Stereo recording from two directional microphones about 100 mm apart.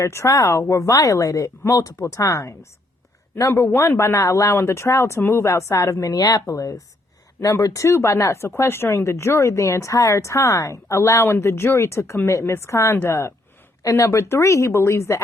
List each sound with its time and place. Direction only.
0.0 s speech: 30° left (ahead or behind)